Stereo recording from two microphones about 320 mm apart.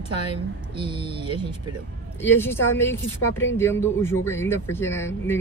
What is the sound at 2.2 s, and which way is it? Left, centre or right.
Speech, centre.